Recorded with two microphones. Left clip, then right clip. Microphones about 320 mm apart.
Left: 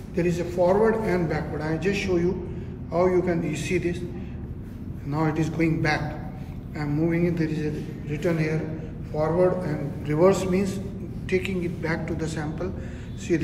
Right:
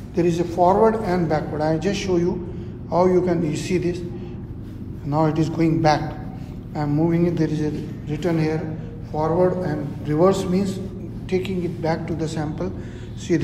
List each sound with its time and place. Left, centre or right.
0.1 s a man's voice: centre
5.1 s a man's voice: centre